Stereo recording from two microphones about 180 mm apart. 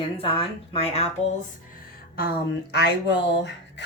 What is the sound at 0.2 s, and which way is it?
Speech, 30° left (ahead or behind).